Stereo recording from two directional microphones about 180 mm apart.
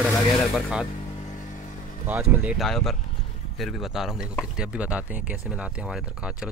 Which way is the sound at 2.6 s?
Centre (ahead or behind).